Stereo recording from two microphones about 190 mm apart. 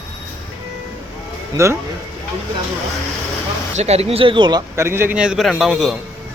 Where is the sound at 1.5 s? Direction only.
15° right (ahead or behind).